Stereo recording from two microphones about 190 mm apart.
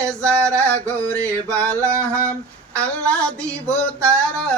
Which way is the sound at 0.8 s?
5° left (ahead or behind).